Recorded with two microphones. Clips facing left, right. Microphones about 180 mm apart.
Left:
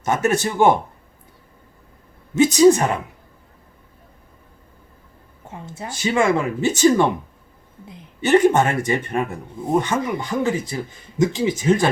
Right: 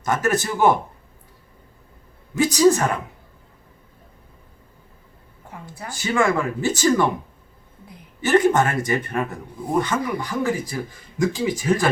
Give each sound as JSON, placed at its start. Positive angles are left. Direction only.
{"t": 0.0, "sound": "a man's voice", "side_deg": 20}
{"t": 2.3, "sound": "a man's voice", "side_deg": 20}
{"t": 5.5, "sound": "a man's voice", "side_deg": 25}